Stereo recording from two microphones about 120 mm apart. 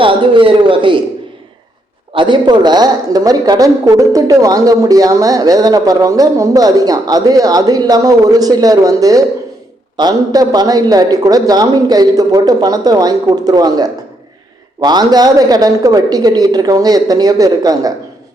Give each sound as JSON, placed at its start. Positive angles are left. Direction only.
{"t": 0.0, "sound": "a man's voice", "side_deg": -45}
{"t": 2.1, "sound": "speech", "side_deg": -40}